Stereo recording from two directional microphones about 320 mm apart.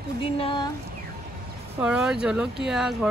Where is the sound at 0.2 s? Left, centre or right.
Centre.